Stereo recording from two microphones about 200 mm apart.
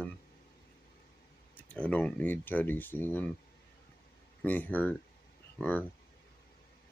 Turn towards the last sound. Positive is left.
turn(degrees=10)  # may be behind; listen again after turning